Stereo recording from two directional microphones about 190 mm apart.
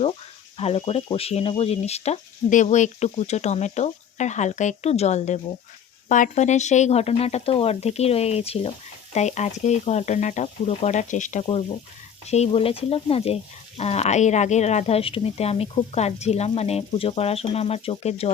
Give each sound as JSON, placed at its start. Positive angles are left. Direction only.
{"t": 0.5, "sound": "speech", "side_deg": 35}